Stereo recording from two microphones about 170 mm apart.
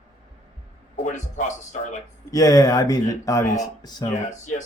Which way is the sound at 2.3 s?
20° left (ahead or behind).